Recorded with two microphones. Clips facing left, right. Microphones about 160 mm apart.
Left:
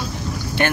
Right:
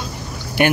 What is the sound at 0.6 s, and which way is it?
Speech, 15° right (ahead or behind).